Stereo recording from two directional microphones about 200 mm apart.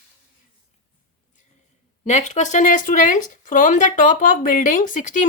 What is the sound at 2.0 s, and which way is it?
Speech, 35° left (ahead or behind).